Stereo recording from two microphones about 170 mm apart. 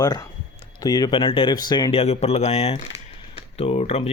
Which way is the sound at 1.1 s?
30° left (ahead or behind).